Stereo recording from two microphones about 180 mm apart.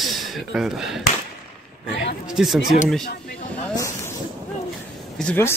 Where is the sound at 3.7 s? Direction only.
15° left (ahead or behind).